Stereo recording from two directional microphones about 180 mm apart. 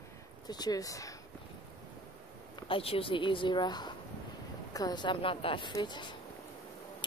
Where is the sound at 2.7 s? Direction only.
30° left (ahead or behind).